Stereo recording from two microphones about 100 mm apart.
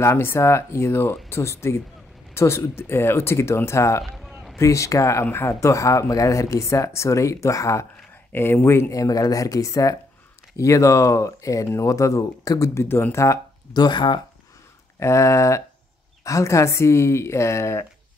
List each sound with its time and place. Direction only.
0.0 s speech: 25° left (ahead or behind)
4.2 s a sound: 10° right (ahead or behind)
4.6 s a man's voice: 30° left (ahead or behind)
8.3 s a man's voice: 20° left (ahead or behind)
13.7 s speech: 50° left (ahead or behind)
15.0 s a man's voice: 30° left (ahead or behind)